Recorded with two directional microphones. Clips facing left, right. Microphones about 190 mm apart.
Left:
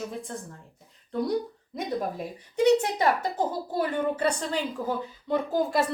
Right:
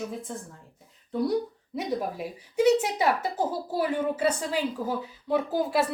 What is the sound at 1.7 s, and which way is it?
Speech, 5° right (ahead or behind).